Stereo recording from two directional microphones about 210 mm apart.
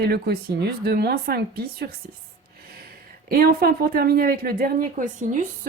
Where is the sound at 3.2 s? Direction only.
45° right (ahead or behind).